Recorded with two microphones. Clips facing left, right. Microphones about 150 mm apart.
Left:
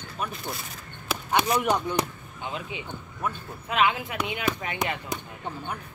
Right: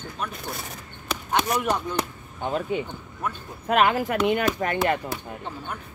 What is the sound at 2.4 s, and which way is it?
Speech, 45° right (ahead or behind).